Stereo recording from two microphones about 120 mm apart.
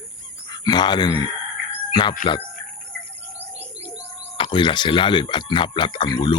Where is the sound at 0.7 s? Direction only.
40° left (ahead or behind).